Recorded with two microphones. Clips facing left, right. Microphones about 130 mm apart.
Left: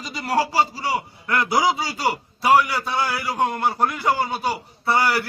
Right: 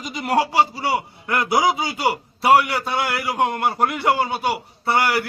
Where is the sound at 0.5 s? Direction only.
25° right (ahead or behind).